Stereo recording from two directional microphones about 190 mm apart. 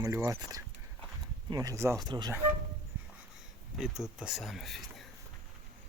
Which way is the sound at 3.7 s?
5° right (ahead or behind).